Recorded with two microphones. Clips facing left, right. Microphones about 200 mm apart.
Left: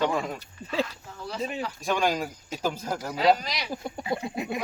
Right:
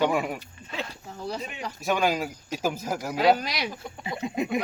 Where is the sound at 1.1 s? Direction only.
35° right (ahead or behind).